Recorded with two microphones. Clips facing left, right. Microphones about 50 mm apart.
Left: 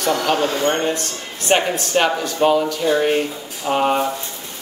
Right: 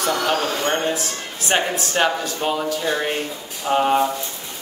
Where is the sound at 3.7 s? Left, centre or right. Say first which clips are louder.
Even; centre.